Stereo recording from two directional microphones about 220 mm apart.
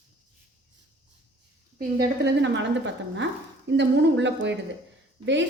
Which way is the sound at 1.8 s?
50° right (ahead or behind).